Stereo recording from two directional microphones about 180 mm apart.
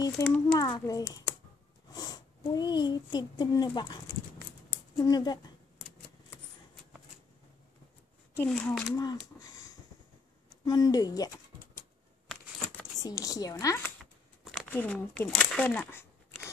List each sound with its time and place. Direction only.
0.2 s speech: 5° left (ahead or behind)
0.6 s a child's voice: 20° left (ahead or behind)
8.4 s speech: 5° left (ahead or behind)
8.8 s speech: 20° left (ahead or behind)
13.0 s speech: 20° left (ahead or behind)
14.4 s a sound: centre (ahead or behind)
14.7 s speech: 10° left (ahead or behind)